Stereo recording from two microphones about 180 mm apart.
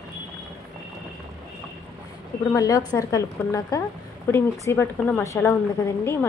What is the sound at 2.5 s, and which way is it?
A woman's voice, 20° left (ahead or behind).